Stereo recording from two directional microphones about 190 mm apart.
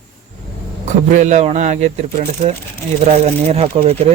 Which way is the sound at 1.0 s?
40° right (ahead or behind).